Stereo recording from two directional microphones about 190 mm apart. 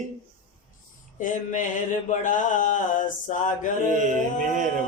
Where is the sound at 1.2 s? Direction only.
40° left (ahead or behind).